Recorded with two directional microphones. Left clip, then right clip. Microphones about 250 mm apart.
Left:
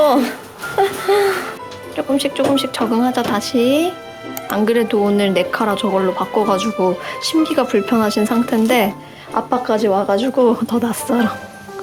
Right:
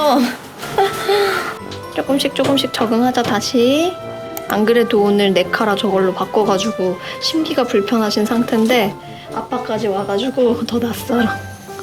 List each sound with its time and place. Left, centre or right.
0.0 s speech: centre
0.8 s music: centre
2.0 s speech: centre